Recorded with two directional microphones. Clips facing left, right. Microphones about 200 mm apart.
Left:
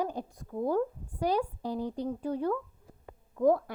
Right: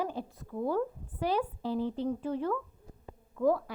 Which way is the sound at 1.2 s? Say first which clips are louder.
Left 2 dB; 40° left (ahead or behind).